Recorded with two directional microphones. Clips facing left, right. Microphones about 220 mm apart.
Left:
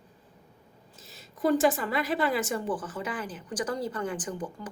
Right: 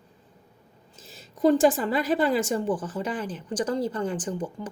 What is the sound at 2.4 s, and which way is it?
Speech, 25° right (ahead or behind).